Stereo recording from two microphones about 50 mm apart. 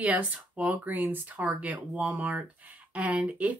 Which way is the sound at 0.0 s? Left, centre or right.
Right.